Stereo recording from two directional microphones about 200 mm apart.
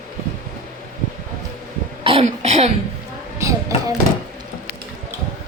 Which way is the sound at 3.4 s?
15° right (ahead or behind).